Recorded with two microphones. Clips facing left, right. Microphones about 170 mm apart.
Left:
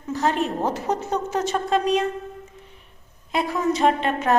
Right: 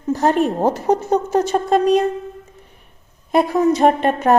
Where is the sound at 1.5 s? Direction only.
45° right (ahead or behind).